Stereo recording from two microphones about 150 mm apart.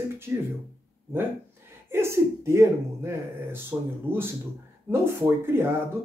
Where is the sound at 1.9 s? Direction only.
20° right (ahead or behind).